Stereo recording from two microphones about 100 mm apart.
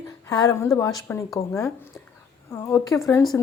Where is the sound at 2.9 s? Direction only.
30° left (ahead or behind).